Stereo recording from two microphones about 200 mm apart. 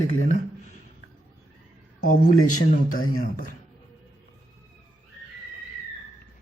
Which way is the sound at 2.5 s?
90° left.